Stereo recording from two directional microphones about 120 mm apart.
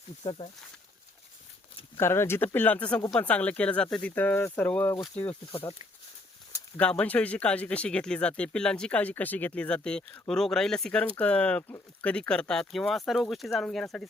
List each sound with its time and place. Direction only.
0.3 s speech: 40° left (ahead or behind)
2.0 s speech: 20° left (ahead or behind)
5.5 s speech: 50° left (ahead or behind)
6.7 s speech: 10° left (ahead or behind)